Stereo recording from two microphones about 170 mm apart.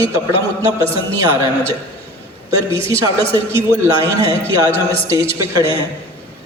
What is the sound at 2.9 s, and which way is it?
A man's voice, 15° right (ahead or behind).